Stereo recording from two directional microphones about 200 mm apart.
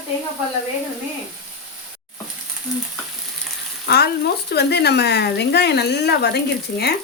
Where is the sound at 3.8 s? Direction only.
55° left (ahead or behind).